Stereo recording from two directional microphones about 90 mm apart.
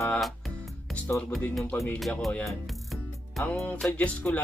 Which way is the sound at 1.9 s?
Centre (ahead or behind).